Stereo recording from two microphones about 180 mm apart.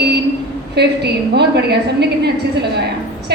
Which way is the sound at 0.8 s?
70° right (ahead or behind).